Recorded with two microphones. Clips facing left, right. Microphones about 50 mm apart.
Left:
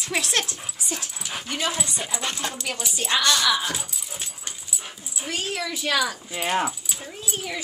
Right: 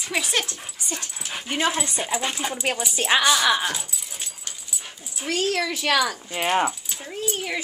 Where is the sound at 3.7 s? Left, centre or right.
Centre.